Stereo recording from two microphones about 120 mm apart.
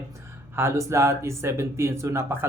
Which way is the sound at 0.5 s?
20° right (ahead or behind).